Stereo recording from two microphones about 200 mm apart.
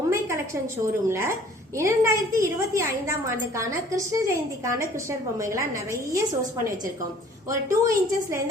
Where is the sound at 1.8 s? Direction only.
15° right (ahead or behind).